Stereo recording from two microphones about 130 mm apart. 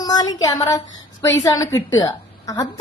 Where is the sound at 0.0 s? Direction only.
30° left (ahead or behind).